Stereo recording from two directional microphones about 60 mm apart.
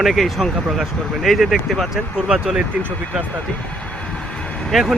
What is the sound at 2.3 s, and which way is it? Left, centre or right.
Speech, centre.